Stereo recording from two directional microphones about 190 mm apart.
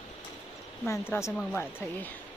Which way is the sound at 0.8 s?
15° left (ahead or behind).